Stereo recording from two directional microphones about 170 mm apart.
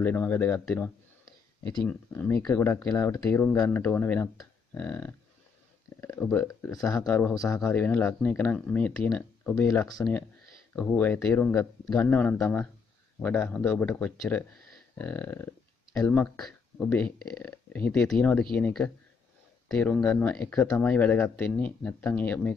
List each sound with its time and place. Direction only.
0.0 s speech: 10° left (ahead or behind)
9.7 s speech: 20° left (ahead or behind)